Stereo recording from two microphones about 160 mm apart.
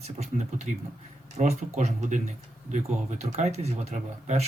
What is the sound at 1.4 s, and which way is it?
Speech, 40° right (ahead or behind).